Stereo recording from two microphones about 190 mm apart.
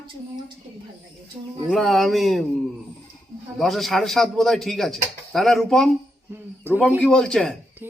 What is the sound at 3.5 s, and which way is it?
Speech, centre (ahead or behind).